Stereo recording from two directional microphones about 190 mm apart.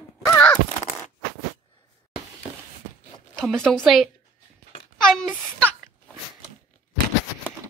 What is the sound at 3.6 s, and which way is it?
Speech, centre (ahead or behind).